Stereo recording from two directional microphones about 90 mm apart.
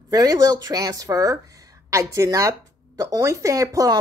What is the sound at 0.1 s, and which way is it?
A woman's voice, 45° right (ahead or behind).